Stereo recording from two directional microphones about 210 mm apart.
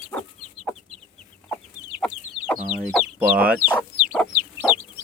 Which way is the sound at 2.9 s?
5° right (ahead or behind).